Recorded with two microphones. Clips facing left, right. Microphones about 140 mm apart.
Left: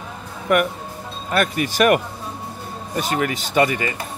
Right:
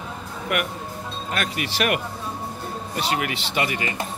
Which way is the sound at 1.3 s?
45° left (ahead or behind).